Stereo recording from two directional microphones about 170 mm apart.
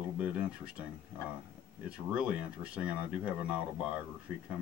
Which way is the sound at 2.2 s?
5° right (ahead or behind).